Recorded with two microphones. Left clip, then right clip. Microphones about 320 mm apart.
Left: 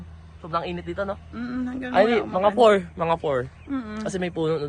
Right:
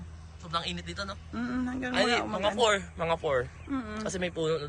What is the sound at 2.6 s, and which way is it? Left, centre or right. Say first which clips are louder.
Speech: left 10 dB; left.